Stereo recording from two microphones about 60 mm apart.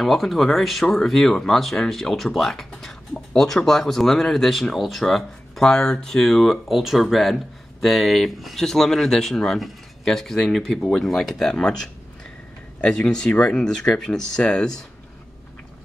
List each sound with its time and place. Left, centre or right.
0.0 s speech: centre
12.8 s speech: centre